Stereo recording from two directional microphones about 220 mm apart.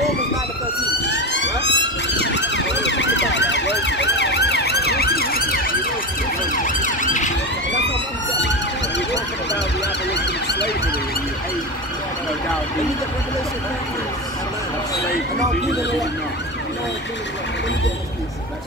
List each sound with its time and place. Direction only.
1.0 s emergency vehicle: 55° left (ahead or behind); by 7.3 s 35° left (ahead or behind)
8.9 s emergency vehicle: 55° left (ahead or behind)